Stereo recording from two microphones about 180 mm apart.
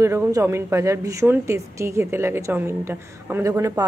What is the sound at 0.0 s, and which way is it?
A woman's voice, 15° right (ahead or behind).